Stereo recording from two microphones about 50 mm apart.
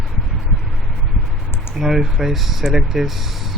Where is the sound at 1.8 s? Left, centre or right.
Centre.